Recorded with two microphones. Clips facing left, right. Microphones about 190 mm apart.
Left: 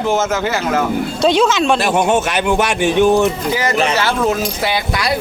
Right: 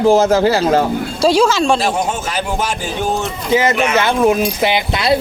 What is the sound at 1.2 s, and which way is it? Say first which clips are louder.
Speech: right 1 dB; centre (ahead or behind).